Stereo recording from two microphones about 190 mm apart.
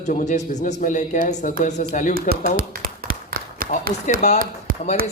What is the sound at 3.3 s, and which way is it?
Run, 50° right (ahead or behind).